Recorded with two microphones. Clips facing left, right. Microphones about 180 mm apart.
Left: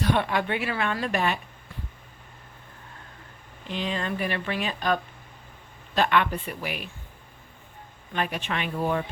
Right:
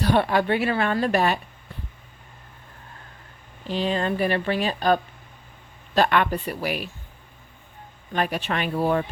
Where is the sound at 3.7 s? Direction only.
35° right (ahead or behind).